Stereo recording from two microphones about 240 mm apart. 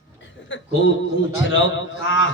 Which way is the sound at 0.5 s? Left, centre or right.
Left.